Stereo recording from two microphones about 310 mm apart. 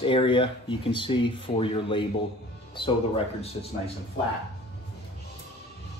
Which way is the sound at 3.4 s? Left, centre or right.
Centre.